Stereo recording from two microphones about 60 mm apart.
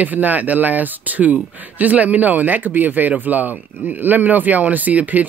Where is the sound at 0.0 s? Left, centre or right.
Right.